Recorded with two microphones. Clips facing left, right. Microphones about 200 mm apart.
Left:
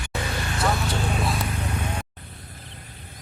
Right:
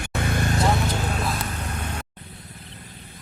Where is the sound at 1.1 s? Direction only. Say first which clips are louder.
Left 1 dB; centre (ahead or behind).